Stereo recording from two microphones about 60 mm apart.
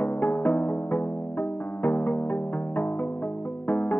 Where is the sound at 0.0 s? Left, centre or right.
Left.